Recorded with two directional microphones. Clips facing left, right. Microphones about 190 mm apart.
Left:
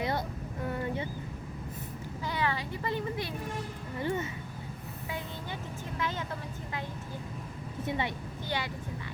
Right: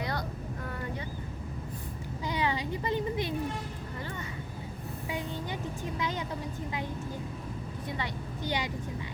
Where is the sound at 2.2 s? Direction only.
15° right (ahead or behind).